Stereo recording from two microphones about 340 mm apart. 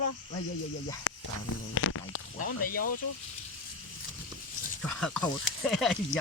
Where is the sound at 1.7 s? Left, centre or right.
Left.